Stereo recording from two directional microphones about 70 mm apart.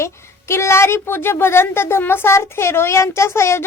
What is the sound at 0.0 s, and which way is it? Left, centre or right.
A woman's voice, left.